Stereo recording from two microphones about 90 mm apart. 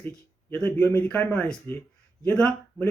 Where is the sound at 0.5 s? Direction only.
20° left (ahead or behind).